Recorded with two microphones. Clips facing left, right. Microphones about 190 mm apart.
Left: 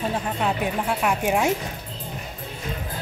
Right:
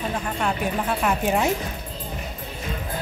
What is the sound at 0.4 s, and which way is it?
Speech, 15° left (ahead or behind).